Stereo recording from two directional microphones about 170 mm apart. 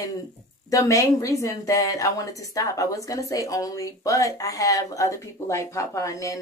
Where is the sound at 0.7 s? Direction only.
20° left (ahead or behind).